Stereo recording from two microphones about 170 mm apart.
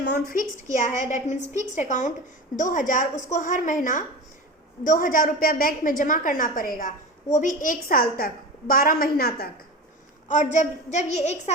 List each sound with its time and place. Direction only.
0.0 s a sound: 75° left (ahead or behind)
0.5 s a woman's voice: 50° left (ahead or behind); by 9.5 s 65° left (ahead or behind)
10.2 s a woman's voice: 45° left (ahead or behind)